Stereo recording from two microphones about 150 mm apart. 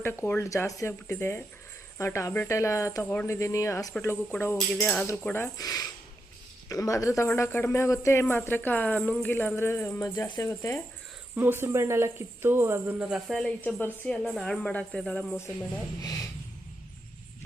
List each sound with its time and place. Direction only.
0.0 s speech: 15° left (ahead or behind)
11.3 s speech: 15° right (ahead or behind); by 15.4 s 10° left (ahead or behind)
16.0 s speech: 25° left (ahead or behind)